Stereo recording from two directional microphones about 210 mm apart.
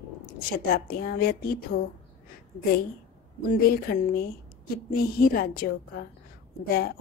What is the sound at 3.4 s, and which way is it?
A woman's voice, 45° left (ahead or behind).